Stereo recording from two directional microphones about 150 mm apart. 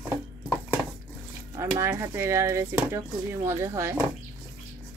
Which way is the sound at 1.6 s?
15° right (ahead or behind).